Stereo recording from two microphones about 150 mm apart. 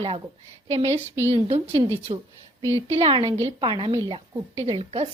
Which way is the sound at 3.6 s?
35° right (ahead or behind).